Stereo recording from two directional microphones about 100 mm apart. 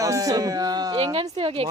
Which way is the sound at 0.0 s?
35° right (ahead or behind).